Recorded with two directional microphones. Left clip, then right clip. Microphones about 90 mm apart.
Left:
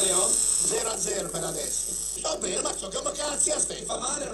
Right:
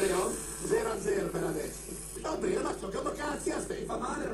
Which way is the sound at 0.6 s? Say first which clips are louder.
Left 1 dB; 40° left (ahead or behind).